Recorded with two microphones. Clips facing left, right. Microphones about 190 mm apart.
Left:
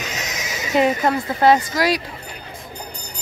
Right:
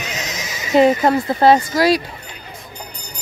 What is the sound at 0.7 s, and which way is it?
Speech, 30° right (ahead or behind).